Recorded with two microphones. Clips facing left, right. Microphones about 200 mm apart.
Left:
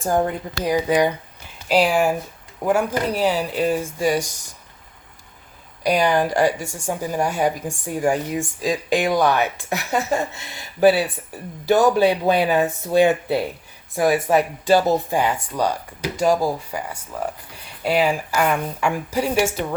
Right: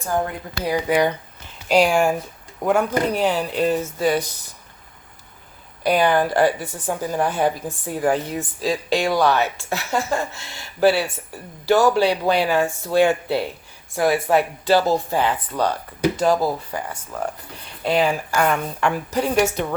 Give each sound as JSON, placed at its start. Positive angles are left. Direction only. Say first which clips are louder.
{"t": 0.2, "sound": "speech", "louder": "left 3 dB", "side_deg": 20}
{"t": 1.6, "sound": "a woman's voice", "louder": "right 1 dB", "side_deg": 5}
{"t": 5.8, "sound": "a woman's voice", "louder": "right 1 dB", "side_deg": 15}